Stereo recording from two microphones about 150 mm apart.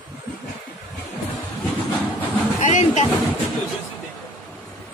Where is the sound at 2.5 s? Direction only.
50° left (ahead or behind).